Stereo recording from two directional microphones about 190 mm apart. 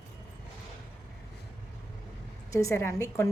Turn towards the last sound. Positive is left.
turn(degrees=15)  # may be behind; listen again after turning